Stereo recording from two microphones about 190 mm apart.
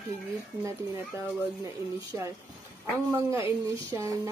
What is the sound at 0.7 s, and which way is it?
Speech, 15° right (ahead or behind).